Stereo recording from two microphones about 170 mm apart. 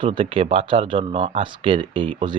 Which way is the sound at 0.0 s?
30° right (ahead or behind).